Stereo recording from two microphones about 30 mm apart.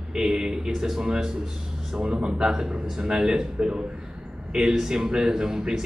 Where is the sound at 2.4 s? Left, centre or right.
Centre.